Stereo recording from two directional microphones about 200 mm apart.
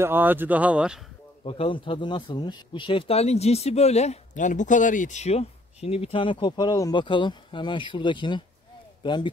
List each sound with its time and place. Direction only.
0.0 s speech: 10° right (ahead or behind)
1.4 s a man's voice: 30° left (ahead or behind)